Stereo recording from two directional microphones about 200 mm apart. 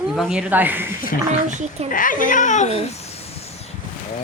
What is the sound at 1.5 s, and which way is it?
Speech, 35° right (ahead or behind).